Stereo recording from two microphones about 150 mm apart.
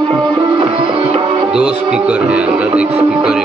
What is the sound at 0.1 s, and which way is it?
Music, 30° right (ahead or behind).